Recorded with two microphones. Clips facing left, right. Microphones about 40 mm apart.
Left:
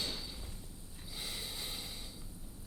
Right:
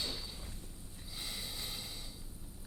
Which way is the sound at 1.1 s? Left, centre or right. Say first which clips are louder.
Left 1 dB; centre.